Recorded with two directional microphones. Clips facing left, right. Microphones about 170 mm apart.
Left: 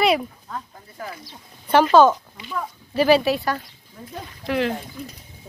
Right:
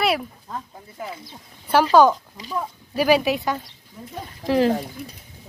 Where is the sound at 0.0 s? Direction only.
5° right (ahead or behind).